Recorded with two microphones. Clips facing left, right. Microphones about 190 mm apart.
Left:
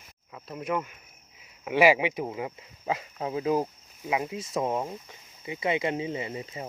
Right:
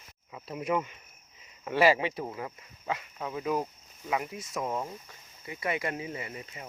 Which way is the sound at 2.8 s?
30° left (ahead or behind).